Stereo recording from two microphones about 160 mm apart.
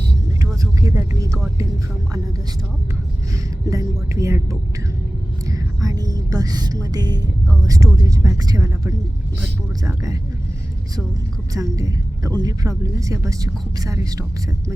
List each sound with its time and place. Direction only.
0.6 s vehicle: 20° right (ahead or behind)
3.7 s a woman's voice: 20° right (ahead or behind)
5.5 s music: 20° right (ahead or behind)
7.7 s a woman's voice: 20° right (ahead or behind)
11.5 s a woman's voice: 20° right (ahead or behind)